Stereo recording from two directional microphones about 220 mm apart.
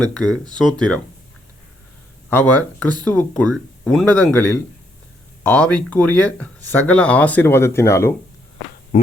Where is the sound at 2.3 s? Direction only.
5° left (ahead or behind).